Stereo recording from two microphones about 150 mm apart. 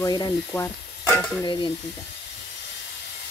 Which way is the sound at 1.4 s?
30° left (ahead or behind).